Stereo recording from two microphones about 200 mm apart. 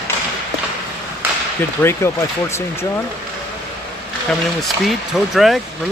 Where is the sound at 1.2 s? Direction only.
10° right (ahead or behind).